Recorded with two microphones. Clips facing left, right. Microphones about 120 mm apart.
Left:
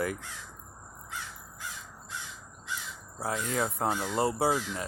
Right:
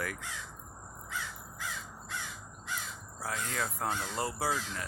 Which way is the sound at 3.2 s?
25° left (ahead or behind).